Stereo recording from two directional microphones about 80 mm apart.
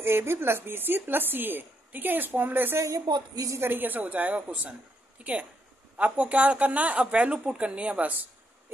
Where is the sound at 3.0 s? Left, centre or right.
Right.